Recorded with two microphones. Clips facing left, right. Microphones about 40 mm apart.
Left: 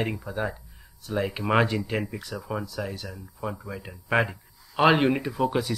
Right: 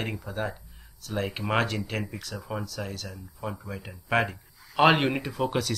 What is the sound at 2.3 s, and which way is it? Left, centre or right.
Speech, centre.